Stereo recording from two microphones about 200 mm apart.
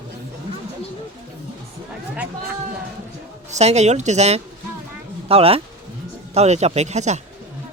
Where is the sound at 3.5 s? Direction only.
35° right (ahead or behind).